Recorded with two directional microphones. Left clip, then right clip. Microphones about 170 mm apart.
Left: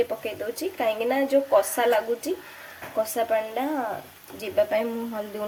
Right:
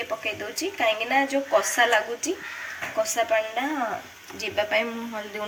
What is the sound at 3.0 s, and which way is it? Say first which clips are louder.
Speech: right 1 dB; 80° left.